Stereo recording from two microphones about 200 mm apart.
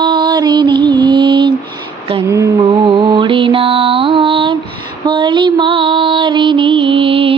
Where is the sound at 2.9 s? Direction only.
25° right (ahead or behind).